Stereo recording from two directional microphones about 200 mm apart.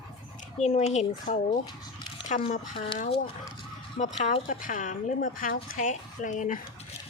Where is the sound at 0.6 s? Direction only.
35° left (ahead or behind).